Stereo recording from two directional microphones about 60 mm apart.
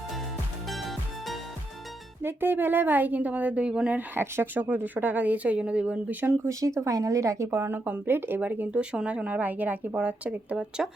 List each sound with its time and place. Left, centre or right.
0.7 s music: centre
2.2 s speech: right; by 3.9 s centre
3.9 s speech: right
6.5 s a woman's voice: right
7.5 s speech: right
8.7 s speech: centre